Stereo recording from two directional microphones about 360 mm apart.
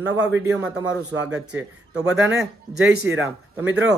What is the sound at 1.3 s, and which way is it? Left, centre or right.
A man's voice, centre.